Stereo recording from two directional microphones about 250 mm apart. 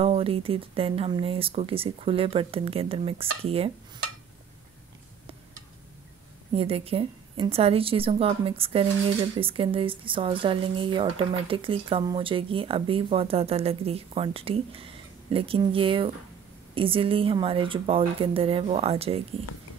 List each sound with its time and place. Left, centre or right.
0.0 s speech: right
6.5 s speech: right